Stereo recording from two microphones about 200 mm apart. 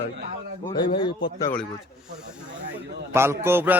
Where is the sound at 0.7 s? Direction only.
20° left (ahead or behind).